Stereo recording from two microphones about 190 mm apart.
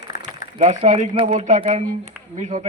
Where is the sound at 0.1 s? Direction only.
40° left (ahead or behind).